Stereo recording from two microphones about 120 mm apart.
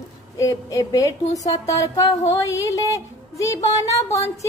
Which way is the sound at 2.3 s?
25° left (ahead or behind).